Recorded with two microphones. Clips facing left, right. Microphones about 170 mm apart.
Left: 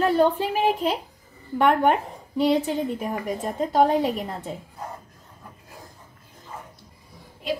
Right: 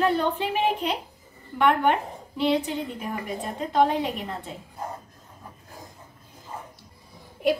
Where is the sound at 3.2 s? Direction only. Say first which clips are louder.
Left 4 dB; 40° left (ahead or behind).